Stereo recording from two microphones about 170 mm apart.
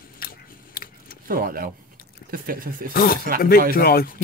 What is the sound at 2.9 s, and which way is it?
Speech, 60° left (ahead or behind).